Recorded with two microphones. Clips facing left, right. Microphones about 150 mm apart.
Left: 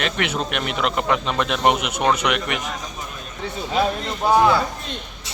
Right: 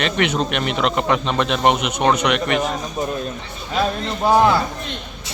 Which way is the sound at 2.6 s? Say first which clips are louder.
Right 8 dB; 45° right (ahead or behind).